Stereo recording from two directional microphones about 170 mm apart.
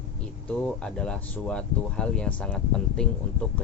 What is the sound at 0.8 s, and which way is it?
Speech, 5° left (ahead or behind).